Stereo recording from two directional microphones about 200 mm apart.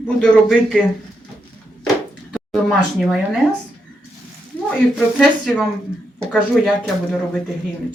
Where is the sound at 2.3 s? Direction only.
Centre (ahead or behind).